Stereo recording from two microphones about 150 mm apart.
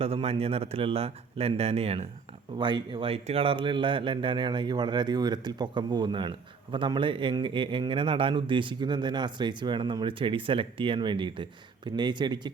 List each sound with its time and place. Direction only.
0.0 s speech: 40° right (ahead or behind)
2.6 s speech: 30° right (ahead or behind)